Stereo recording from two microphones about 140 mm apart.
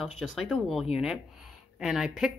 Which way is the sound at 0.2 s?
Centre (ahead or behind).